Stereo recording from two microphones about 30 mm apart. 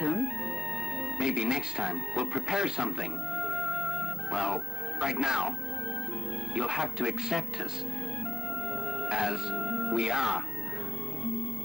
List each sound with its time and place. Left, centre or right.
0.0 s music: centre
1.1 s speech: centre
6.5 s speech: centre
9.0 s speech: centre